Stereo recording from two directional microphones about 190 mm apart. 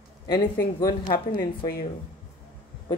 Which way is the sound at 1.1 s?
50° left (ahead or behind).